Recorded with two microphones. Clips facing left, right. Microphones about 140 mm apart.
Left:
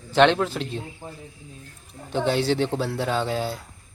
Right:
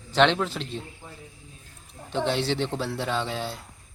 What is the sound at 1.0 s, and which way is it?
Speech, 45° left (ahead or behind).